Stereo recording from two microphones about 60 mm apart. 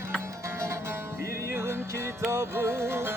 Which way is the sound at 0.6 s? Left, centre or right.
Right.